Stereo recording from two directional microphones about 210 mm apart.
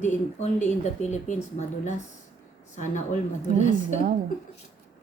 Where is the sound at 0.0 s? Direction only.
35° left (ahead or behind).